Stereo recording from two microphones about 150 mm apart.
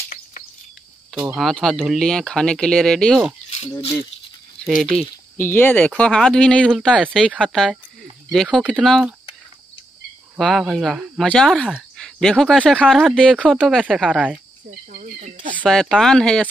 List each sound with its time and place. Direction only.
1.1 s speech: 10° right (ahead or behind)
1.4 s speech: centre (ahead or behind)
4.6 s speech: centre (ahead or behind)
5.0 s speech: 15° left (ahead or behind)
10.4 s speech: centre (ahead or behind)
14.9 s a sound: 65° right (ahead or behind)
15.5 s speech: 5° left (ahead or behind)